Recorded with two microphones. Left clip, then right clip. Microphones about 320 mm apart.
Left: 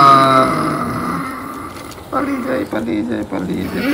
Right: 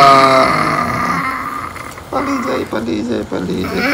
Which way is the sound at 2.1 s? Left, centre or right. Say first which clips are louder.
Right 2 dB; centre.